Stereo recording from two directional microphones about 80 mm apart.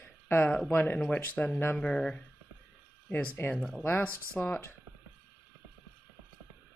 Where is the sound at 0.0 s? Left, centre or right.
Left.